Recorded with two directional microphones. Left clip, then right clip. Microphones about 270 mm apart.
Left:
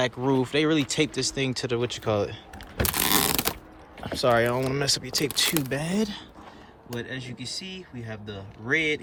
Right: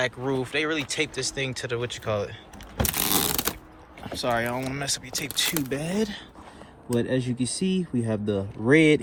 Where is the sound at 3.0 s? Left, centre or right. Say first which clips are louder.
Left 3 dB; left.